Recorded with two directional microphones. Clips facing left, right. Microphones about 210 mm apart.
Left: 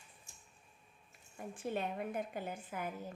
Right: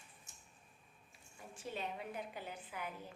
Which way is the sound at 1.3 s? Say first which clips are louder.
Left 6 dB; 55° left (ahead or behind).